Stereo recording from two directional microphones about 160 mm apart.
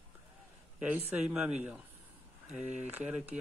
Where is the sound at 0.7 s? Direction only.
5° right (ahead or behind).